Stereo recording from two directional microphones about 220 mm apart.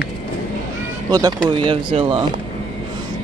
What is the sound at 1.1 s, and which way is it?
Speech, 20° right (ahead or behind).